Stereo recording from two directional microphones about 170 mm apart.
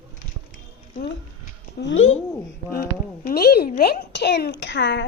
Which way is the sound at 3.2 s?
65° left (ahead or behind).